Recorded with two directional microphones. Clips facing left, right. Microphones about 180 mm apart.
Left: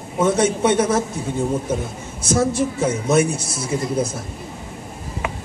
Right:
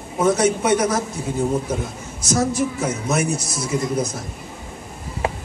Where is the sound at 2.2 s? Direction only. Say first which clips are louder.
Left 1 dB; 30° left (ahead or behind).